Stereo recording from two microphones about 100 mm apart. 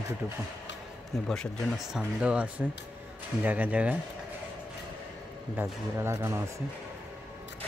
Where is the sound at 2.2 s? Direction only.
10° right (ahead or behind).